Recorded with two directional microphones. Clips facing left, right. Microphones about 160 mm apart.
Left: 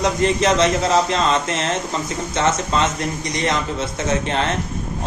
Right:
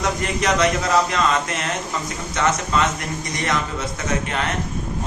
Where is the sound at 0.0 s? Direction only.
25° left (ahead or behind).